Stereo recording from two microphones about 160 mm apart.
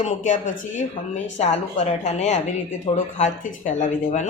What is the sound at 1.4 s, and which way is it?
Speech, 45° left (ahead or behind).